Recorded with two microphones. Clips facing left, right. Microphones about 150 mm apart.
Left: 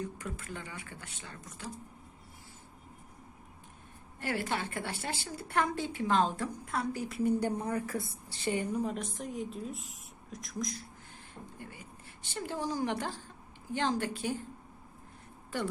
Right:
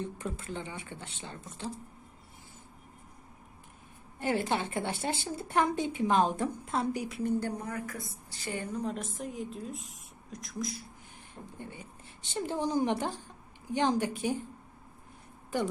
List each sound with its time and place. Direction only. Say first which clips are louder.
0.0 s a woman's voice: right 2 dB; 25° right (ahead or behind)
4.2 s a woman's voice: right 4 dB; 20° right (ahead or behind)
7.1 s speech: left 1 dB; 10° left (ahead or behind)
7.7 s a woman's voice: left 4 dB; 30° left (ahead or behind); by 10.8 s 5° right (ahead or behind)
12.2 s a woman's voice: right 4 dB; 20° right (ahead or behind)